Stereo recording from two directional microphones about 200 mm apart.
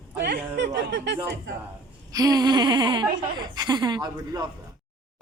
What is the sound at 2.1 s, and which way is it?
A man's voice, 20° right (ahead or behind).